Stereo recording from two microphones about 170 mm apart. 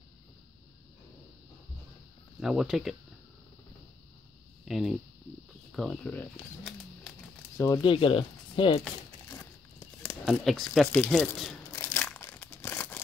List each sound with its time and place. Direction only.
2.4 s speech: 5° right (ahead or behind)
4.6 s speech: centre (ahead or behind)
7.5 s speech: 20° left (ahead or behind)
7.8 s speech: 30° left (ahead or behind)
9.4 s a sound: 15° left (ahead or behind)
10.2 s speech: centre (ahead or behind)
11.7 s crumpling: 15° left (ahead or behind)